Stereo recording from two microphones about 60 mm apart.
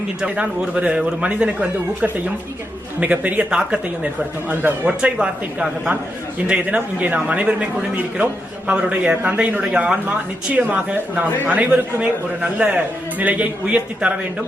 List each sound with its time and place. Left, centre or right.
0.3 s a man's voice: right
3.0 s a man's voice: right
3.5 s a man's voice: centre